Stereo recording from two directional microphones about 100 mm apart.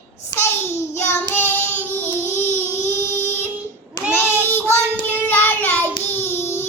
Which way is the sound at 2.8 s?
25° left (ahead or behind).